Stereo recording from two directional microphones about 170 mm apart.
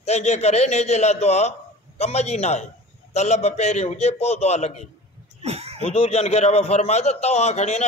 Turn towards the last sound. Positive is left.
turn(degrees=40)  # may be behind; listen again after turning